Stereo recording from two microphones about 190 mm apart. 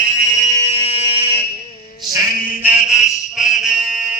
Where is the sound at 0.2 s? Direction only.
40° right (ahead or behind).